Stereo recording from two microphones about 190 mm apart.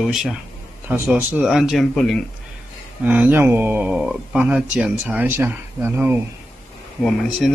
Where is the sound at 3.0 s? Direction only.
10° right (ahead or behind).